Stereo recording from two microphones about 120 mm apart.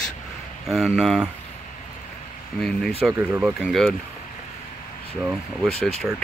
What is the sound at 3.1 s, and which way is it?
Speech, 15° right (ahead or behind).